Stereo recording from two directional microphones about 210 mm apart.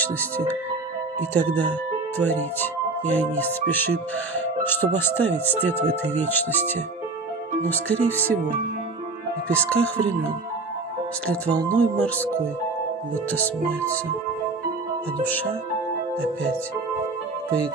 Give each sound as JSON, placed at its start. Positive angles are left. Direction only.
{"t": 1.5, "sound": "speech", "side_deg": 10}
{"t": 6.3, "sound": "speech", "side_deg": 10}
{"t": 9.5, "sound": "speech", "side_deg": 5}
{"t": 11.7, "sound": "speech", "side_deg": 5}
{"t": 13.3, "sound": "speech", "side_deg": 5}